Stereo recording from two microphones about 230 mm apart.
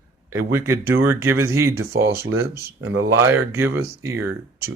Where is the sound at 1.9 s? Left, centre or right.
Right.